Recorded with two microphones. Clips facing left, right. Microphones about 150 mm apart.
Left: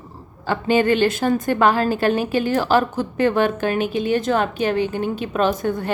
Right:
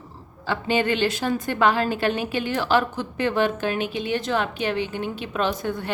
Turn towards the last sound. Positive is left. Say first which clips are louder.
# left 5 dB
turn(degrees=45)  # may be behind; listen again after turning